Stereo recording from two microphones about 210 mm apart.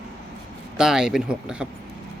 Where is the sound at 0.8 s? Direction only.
5° right (ahead or behind).